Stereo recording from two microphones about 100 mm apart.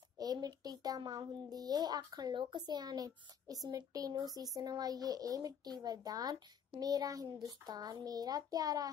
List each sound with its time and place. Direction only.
0.2 s a child's voice: 40° right (ahead or behind)